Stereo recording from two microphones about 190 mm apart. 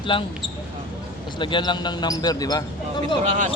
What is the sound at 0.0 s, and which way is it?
Speech, 25° left (ahead or behind).